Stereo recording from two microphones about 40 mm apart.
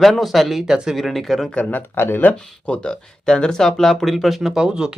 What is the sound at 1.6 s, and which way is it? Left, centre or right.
Speech, left.